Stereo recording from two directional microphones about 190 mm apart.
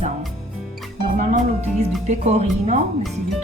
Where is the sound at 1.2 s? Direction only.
35° right (ahead or behind).